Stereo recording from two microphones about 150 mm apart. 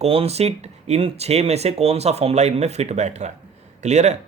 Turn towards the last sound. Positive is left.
turn(degrees=-50)  # may be behind; listen again after turning